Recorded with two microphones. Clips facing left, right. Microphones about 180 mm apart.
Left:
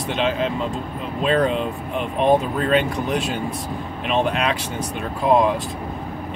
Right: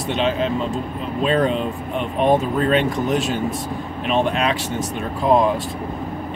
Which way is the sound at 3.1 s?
40° right (ahead or behind).